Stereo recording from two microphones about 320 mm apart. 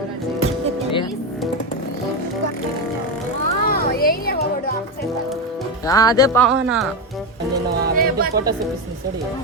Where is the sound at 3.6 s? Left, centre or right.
Left.